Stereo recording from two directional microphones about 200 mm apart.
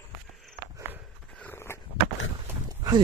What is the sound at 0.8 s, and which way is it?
Horse, 10° right (ahead or behind).